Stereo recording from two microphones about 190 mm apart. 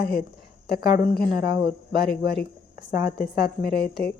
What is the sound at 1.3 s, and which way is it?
Speech, 55° left (ahead or behind).